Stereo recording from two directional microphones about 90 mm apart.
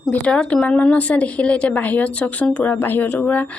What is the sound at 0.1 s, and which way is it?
A woman's voice, 15° left (ahead or behind).